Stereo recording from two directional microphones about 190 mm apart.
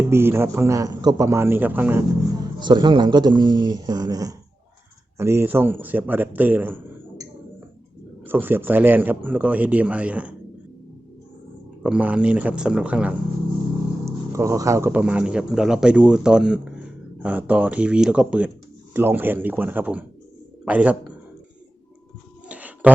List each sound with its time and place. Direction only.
0.1 s a man's voice: 10° right (ahead or behind)
2.6 s a man's voice: 25° right (ahead or behind)
8.3 s a man's voice: 10° right (ahead or behind)
11.8 s a man's voice: 5° right (ahead or behind)
22.4 s a sound: 10° right (ahead or behind)